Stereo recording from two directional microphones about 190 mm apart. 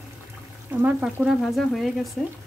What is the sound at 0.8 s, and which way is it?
Frying, 5° right (ahead or behind).